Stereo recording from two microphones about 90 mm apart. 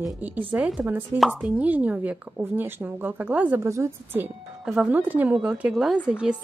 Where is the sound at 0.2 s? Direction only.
20° right (ahead or behind).